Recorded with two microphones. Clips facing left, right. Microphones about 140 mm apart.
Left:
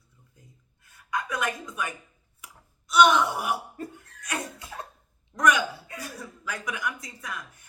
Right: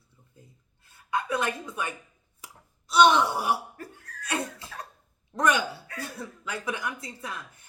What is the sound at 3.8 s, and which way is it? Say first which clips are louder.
Cough: left 4 dB; 20° left (ahead or behind).